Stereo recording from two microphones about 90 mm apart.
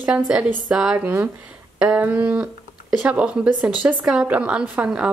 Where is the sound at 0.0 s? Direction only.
15° right (ahead or behind).